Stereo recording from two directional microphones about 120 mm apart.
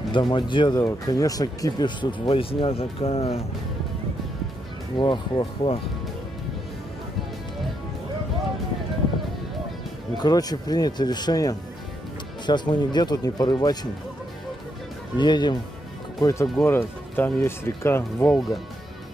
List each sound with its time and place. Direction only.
0.1 s speech: 40° left (ahead or behind)
0.8 s speech: 30° left (ahead or behind); by 3.4 s 55° left (ahead or behind)
4.9 s speech: 40° left (ahead or behind)
10.1 s speech: 35° left (ahead or behind)
15.1 s speech: 40° left (ahead or behind)
16.2 s speech: 25° left (ahead or behind)